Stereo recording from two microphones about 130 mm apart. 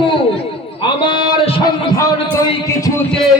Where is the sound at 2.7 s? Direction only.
25° left (ahead or behind).